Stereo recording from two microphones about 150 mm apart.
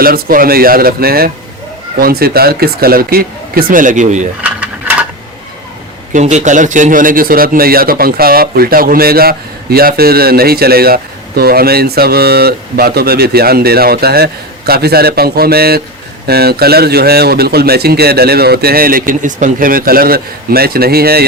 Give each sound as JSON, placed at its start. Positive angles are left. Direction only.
{"t": 0.0, "sound": "speech", "side_deg": -75}
{"t": 6.1, "sound": "a man's voice", "side_deg": -55}